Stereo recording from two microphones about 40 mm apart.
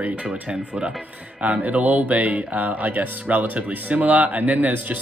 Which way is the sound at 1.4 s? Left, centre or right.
Right.